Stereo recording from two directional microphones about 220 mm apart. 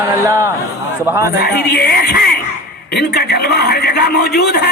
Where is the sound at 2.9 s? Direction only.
50° left (ahead or behind).